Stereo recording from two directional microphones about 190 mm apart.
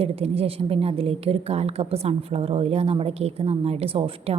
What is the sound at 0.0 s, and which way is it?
A woman's voice, 30° right (ahead or behind).